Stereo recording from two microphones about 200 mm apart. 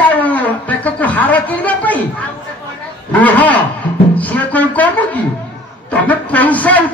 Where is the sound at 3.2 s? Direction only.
10° left (ahead or behind).